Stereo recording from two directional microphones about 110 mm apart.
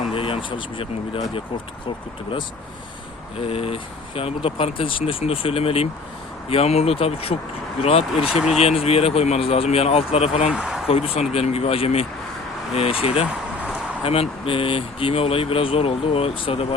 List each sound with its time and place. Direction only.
0.1 s speech: 55° left (ahead or behind)
3.4 s speech: 60° left (ahead or behind)
8.1 s speech: 5° right (ahead or behind)
8.6 s speech: 65° left (ahead or behind)
10.5 s speech: 5° right (ahead or behind)
10.8 s speech: 60° left (ahead or behind)